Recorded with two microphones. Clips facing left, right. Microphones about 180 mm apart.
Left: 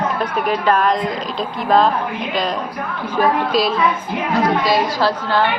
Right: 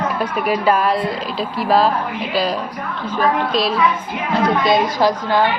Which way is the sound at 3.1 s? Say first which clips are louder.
Left 1 dB; 10° left (ahead or behind).